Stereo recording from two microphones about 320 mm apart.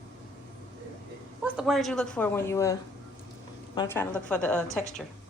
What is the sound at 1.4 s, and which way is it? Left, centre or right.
A woman's voice, centre.